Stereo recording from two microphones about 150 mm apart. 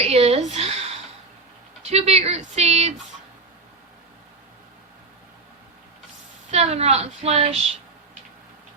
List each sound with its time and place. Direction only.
0.0 s a sound: 40° right (ahead or behind)
1.8 s speech: 45° right (ahead or behind)
6.5 s a woman's voice: 45° right (ahead or behind)